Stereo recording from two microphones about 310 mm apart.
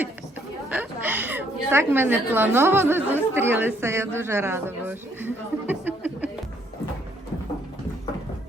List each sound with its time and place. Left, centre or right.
0.7 s a woman's voice: centre